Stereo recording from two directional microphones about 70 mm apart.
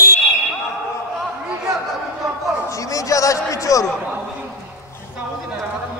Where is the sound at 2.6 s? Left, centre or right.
Left.